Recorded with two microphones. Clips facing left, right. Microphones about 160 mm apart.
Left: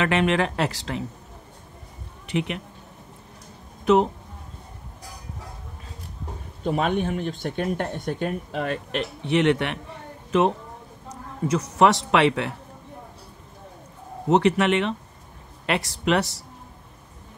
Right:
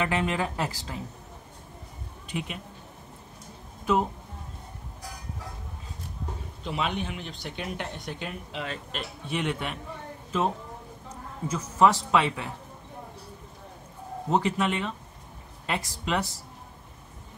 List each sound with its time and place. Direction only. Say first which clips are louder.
0.0 s a man's voice: left 6 dB; 75° left (ahead or behind)
2.2 s speech: left 8 dB; 70° left (ahead or behind)
3.8 s speech: left 7 dB; 70° left (ahead or behind)
6.6 s a man's voice: left 7 dB; 50° left (ahead or behind); by 12.5 s 70° left (ahead or behind)
14.3 s a man's voice: left 7 dB; 75° left (ahead or behind)